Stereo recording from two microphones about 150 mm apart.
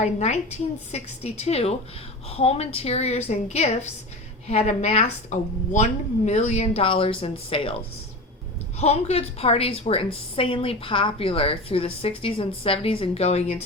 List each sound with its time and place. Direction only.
0.0 s a woman's voice: 45° left (ahead or behind)
8.8 s a woman's voice: 45° left (ahead or behind)